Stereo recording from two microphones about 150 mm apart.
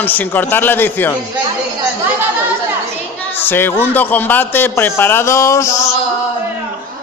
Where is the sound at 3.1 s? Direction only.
15° left (ahead or behind).